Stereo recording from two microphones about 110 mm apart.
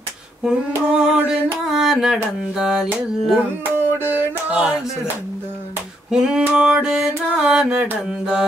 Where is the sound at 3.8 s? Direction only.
20° right (ahead or behind).